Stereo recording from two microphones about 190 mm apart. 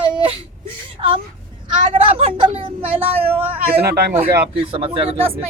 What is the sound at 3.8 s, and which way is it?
Speech, 55° right (ahead or behind).